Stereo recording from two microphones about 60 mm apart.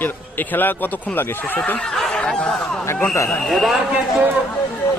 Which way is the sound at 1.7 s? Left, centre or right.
Centre.